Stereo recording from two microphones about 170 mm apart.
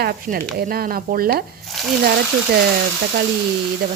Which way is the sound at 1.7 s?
Centre (ahead or behind).